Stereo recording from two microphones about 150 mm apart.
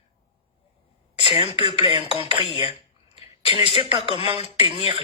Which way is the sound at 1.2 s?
40° left (ahead or behind).